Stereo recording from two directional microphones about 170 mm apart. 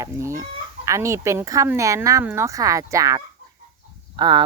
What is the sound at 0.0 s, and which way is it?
Chicken, 20° right (ahead or behind).